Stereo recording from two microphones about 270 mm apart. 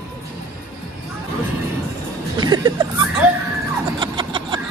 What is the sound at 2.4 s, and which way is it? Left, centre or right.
Speech, centre.